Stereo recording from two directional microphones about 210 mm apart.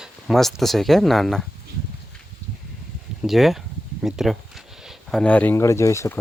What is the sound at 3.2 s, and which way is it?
Speech, centre (ahead or behind).